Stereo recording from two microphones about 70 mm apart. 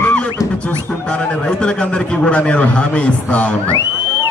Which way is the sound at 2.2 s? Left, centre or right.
Centre.